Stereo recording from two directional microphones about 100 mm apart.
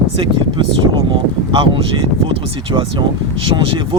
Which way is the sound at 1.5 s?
55° right (ahead or behind).